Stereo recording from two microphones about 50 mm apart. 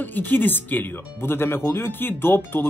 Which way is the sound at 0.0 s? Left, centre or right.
Left.